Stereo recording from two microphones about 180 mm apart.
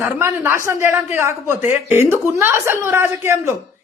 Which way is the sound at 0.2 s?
15° right (ahead or behind).